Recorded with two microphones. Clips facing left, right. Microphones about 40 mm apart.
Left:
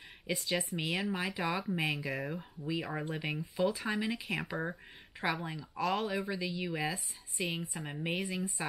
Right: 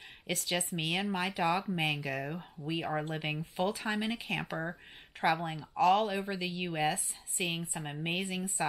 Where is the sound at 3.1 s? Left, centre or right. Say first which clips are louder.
Right 1 dB; right.